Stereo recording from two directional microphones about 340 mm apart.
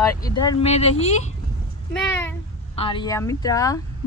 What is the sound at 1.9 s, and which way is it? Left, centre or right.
Speech, centre.